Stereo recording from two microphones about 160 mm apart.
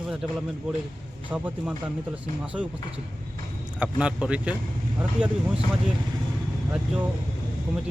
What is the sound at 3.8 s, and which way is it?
Speech, 5° right (ahead or behind).